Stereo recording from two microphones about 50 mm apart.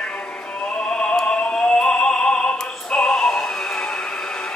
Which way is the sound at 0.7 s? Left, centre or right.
Centre.